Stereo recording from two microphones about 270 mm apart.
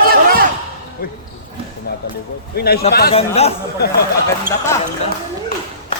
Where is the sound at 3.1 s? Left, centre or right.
Left.